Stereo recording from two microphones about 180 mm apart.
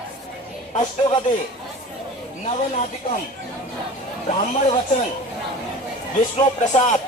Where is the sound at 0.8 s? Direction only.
25° left (ahead or behind).